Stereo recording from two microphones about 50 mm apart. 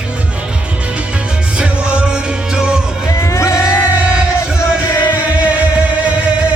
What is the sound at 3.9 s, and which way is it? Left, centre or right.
Music, right.